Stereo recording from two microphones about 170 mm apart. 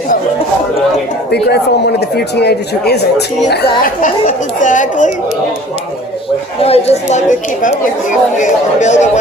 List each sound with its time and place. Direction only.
1.3 s speech: 75° left (ahead or behind)
3.5 s speech: 55° left (ahead or behind)
6.6 s speech: 35° left (ahead or behind)